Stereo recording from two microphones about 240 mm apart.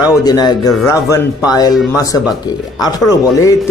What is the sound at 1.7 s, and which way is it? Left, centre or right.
Speech, centre.